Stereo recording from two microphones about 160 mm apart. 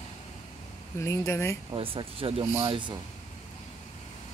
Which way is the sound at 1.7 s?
35° right (ahead or behind).